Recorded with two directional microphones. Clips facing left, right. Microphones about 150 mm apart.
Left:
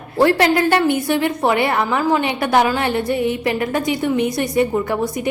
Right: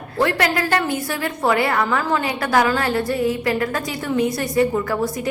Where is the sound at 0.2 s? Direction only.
30° left (ahead or behind).